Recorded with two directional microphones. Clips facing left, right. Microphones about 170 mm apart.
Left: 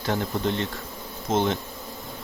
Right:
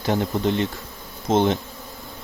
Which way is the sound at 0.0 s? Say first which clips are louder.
Right 4 dB; 20° right (ahead or behind).